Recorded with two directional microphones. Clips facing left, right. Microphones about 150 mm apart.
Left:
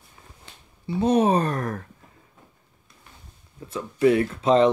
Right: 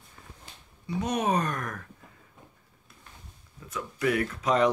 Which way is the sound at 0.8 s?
30° left (ahead or behind).